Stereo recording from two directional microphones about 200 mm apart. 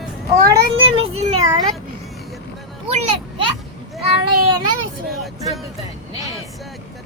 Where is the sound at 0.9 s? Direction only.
30° right (ahead or behind).